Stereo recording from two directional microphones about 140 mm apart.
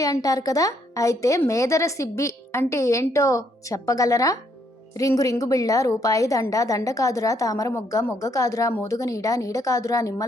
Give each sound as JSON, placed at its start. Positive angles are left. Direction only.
{"t": 0.0, "sound": "a woman's voice", "side_deg": 25}